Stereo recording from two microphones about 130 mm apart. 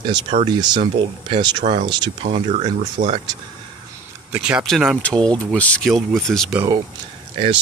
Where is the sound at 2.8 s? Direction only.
65° right (ahead or behind).